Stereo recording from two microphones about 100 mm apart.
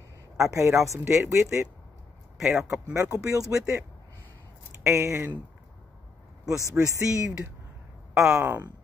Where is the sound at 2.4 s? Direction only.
5° right (ahead or behind).